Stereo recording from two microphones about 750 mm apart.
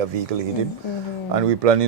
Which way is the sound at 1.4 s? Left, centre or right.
Right.